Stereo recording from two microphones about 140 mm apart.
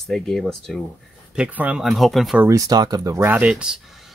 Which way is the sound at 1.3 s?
10° right (ahead or behind).